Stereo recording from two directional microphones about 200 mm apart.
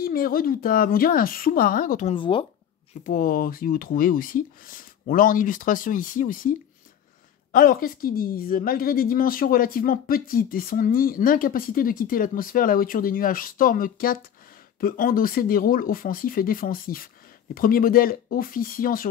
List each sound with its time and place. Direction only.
0.0 s a woman's voice: 45° left (ahead or behind)
2.1 s speech: 25° left (ahead or behind)
3.0 s a woman's voice: 45° left (ahead or behind)
7.5 s a woman's voice: 45° left (ahead or behind)